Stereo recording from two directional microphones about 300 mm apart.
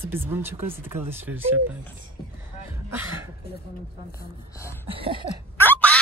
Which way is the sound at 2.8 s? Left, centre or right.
Centre.